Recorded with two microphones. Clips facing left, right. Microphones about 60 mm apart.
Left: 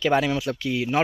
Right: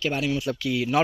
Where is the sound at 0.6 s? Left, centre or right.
Left.